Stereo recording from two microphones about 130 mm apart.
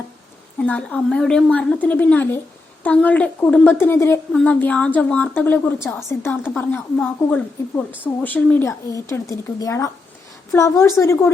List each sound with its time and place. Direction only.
0.6 s a woman's voice: 10° left (ahead or behind)
4.3 s a woman's voice: 10° left (ahead or behind)
8.9 s a woman's voice: 25° left (ahead or behind)